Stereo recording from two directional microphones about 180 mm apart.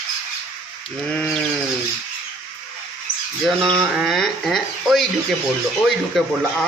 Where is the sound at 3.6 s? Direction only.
5° left (ahead or behind).